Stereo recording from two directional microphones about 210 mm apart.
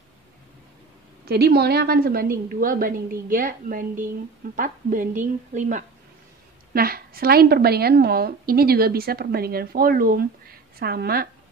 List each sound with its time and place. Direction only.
1.2 s a woman's voice: 50° right (ahead or behind)